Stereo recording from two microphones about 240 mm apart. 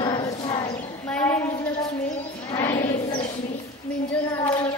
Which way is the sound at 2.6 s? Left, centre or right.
Left.